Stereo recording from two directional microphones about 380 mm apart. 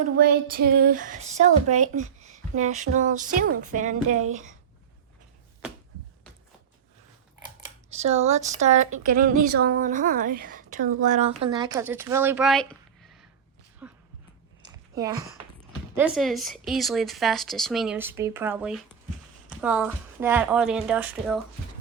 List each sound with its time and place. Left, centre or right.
0.0 s speech: right
4.2 s a woman's voice: right
7.9 s speech: centre
13.8 s a sound: centre
16.0 s speech: centre